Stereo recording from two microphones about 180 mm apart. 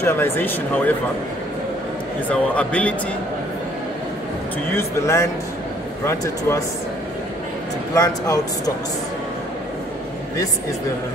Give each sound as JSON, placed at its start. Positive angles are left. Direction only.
{"t": 0.0, "sound": "speech", "side_deg": 15}
{"t": 2.2, "sound": "speech", "side_deg": 5}
{"t": 4.7, "sound": "speech", "side_deg": 15}
{"t": 7.9, "sound": "speech", "side_deg": 20}